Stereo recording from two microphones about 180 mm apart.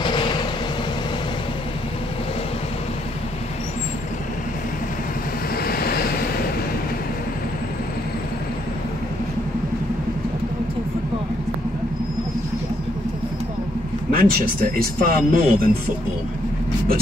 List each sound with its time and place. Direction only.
0.0 s vehicle: 25° left (ahead or behind)
5.6 s vehicle: 55° left (ahead or behind)
14.1 s speech: 55° right (ahead or behind)